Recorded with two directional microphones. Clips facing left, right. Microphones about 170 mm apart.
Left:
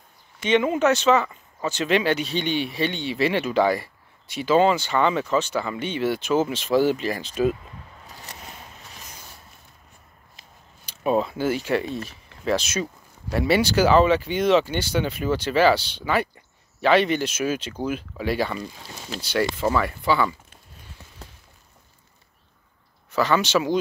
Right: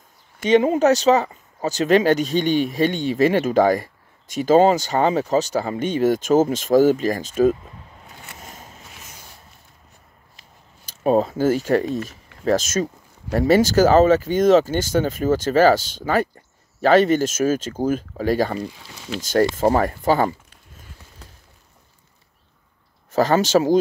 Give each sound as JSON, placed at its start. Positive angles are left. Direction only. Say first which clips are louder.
{"t": 0.4, "sound": "speech", "louder": "right 4 dB", "side_deg": -40}
{"t": 8.1, "sound": "a sound", "louder": "left 1 dB", "side_deg": 35}
{"t": 8.4, "sound": "a sound", "louder": "right 1 dB", "side_deg": -40}
{"t": 10.9, "sound": "speech", "louder": "right 4 dB", "side_deg": -40}
{"t": 18.9, "sound": "speech", "louder": "right 4 dB", "side_deg": 35}
{"t": 19.2, "sound": "speech", "louder": "right 6 dB", "side_deg": -45}
{"t": 23.1, "sound": "speech", "louder": "right 4 dB", "side_deg": -40}